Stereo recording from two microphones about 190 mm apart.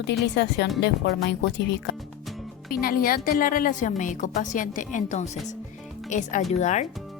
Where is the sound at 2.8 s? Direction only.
50° left (ahead or behind).